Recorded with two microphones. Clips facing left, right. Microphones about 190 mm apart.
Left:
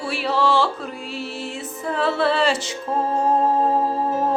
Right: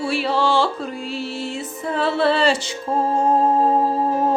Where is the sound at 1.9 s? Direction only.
Centre (ahead or behind).